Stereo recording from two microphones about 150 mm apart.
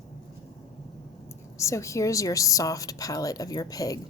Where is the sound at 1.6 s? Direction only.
20° left (ahead or behind).